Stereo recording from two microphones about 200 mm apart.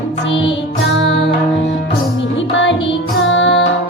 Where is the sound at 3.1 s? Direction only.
75° left (ahead or behind).